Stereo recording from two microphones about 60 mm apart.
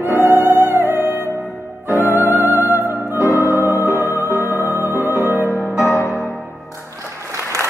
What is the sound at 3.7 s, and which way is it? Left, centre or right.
Music, left.